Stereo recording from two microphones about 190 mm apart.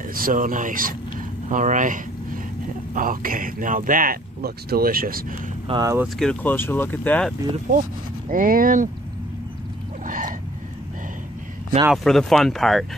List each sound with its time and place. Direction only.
0.1 s speech: 45° right (ahead or behind)
5.7 s speech: 20° right (ahead or behind)
6.1 s speech: 5° left (ahead or behind)
8.3 s speech: 45° right (ahead or behind)
10.0 s a sound: 45° right (ahead or behind)
11.9 s speech: centre (ahead or behind)